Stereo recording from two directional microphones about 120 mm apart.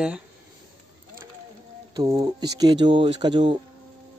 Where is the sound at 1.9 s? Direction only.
35° right (ahead or behind).